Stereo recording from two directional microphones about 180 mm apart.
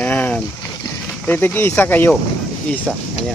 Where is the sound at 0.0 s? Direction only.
10° left (ahead or behind).